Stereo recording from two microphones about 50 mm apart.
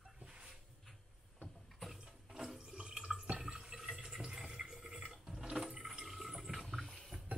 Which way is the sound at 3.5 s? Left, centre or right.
Centre.